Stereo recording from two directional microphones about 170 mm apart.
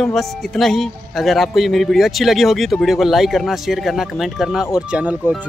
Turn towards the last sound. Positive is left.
turn(degrees=-10)  # may be behind; listen again after turning